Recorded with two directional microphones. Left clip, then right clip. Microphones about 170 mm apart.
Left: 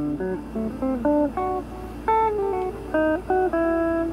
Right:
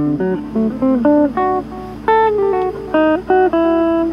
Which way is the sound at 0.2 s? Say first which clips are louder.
Right 10 dB; 20° right (ahead or behind).